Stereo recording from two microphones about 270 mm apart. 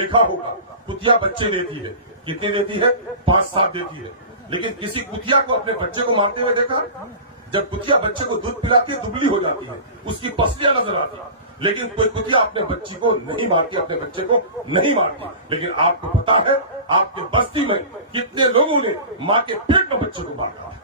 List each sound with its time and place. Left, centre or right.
0.0 s a man's voice: centre
10.3 s a man's voice: centre